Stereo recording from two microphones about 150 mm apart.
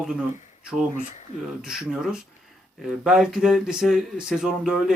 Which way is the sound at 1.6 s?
5° right (ahead or behind).